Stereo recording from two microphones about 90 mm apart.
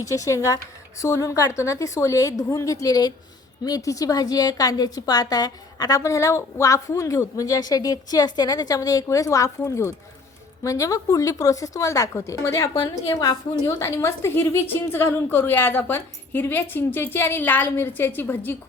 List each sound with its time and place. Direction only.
0.0 s a woman's voice: 35° left (ahead or behind)
13.1 s a woman's voice: 45° left (ahead or behind)
13.7 s a woman's voice: 35° left (ahead or behind)